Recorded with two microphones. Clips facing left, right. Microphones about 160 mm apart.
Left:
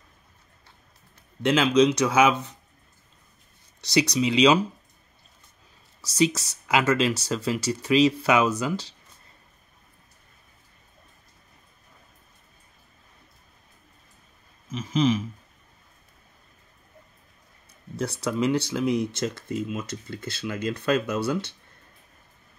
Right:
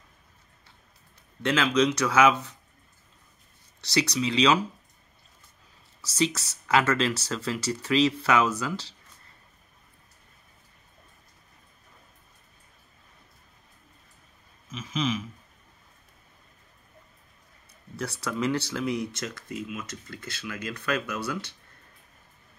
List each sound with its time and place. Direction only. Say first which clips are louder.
1.4 s speech: left 4 dB; 15° left (ahead or behind)
3.8 s speech: left 4 dB; 15° left (ahead or behind)
5.9 s speech: left 4 dB; 15° left (ahead or behind)
14.7 s a sound: left 6 dB; 35° left (ahead or behind)
17.9 s speech: left 4 dB; 20° left (ahead or behind)